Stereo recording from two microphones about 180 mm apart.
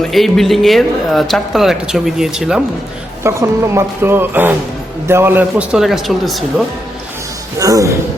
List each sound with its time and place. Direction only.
0.0 s speech: centre (ahead or behind)
3.2 s speech: 15° right (ahead or behind)
7.6 s a man's voice: 20° right (ahead or behind)